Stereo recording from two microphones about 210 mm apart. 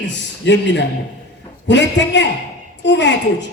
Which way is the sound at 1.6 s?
55° left (ahead or behind).